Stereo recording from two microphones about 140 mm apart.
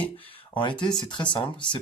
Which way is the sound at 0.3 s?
35° left (ahead or behind).